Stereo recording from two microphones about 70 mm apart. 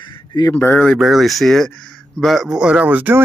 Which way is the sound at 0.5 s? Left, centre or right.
Left.